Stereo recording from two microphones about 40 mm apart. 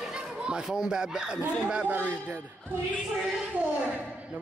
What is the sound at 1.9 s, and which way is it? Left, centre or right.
Speech, right.